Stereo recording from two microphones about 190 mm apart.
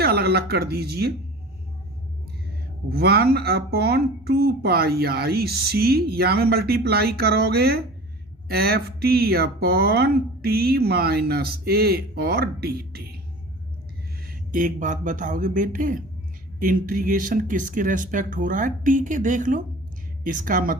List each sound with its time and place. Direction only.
0.0 s speech: 55° right (ahead or behind)
2.9 s speech: 55° right (ahead or behind)
14.3 s speech: 45° right (ahead or behind)